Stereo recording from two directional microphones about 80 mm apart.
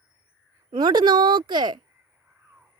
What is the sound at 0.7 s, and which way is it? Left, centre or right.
A woman's voice, right.